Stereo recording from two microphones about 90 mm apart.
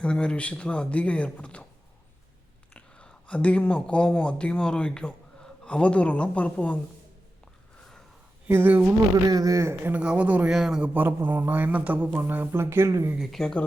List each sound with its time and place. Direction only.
0.0 s a man's voice: 10° left (ahead or behind)
2.7 s a sound: 15° left (ahead or behind)
4.2 s a man's voice: 10° left (ahead or behind)
8.4 s speech: 20° right (ahead or behind)
9.3 s speech: 40° right (ahead or behind)
9.9 s speech: 15° right (ahead or behind)
10.5 s speech: 5° right (ahead or behind)
10.8 s speech: 20° right (ahead or behind)
13.1 s speech: centre (ahead or behind)